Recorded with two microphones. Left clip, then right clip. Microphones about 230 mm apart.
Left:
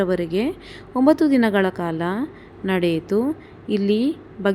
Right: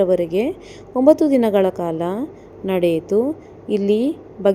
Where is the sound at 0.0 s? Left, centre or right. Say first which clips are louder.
Right 5 dB; left.